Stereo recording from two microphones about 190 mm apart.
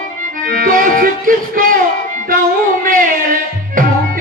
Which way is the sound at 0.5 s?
45° right (ahead or behind).